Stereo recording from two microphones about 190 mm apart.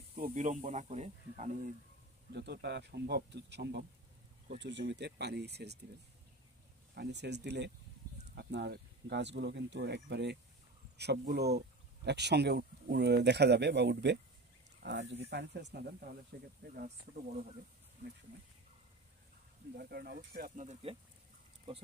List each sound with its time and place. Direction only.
0.1 s speech: 45° right (ahead or behind)
2.3 s speech: 60° right (ahead or behind)
7.0 s speech: 65° right (ahead or behind)
19.7 s speech: 55° right (ahead or behind); by 21.0 s 35° right (ahead or behind)